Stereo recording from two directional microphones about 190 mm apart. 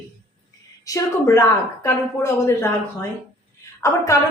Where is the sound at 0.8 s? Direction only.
15° left (ahead or behind).